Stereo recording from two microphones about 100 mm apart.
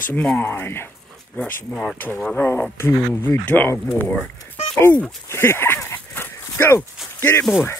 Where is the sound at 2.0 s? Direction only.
20° left (ahead or behind).